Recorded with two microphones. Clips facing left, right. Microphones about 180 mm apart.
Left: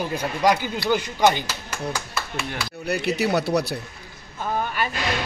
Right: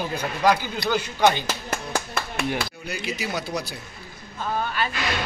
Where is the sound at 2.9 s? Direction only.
65° left (ahead or behind).